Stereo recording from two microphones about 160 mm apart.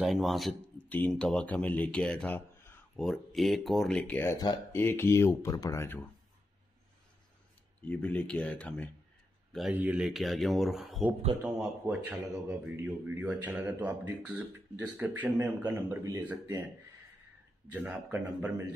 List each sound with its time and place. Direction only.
0.0 s speech: centre (ahead or behind)
0.8 s speech: 10° left (ahead or behind)
3.1 s speech: centre (ahead or behind); by 5.9 s 20° left (ahead or behind)
7.8 s speech: 10° left (ahead or behind)
9.5 s speech: 5° right (ahead or behind)
17.6 s speech: 10° right (ahead or behind)